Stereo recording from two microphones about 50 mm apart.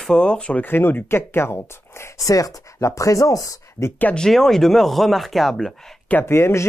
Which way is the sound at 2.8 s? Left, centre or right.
Left.